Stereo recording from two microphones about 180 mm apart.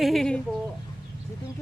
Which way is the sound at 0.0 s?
Centre (ahead or behind).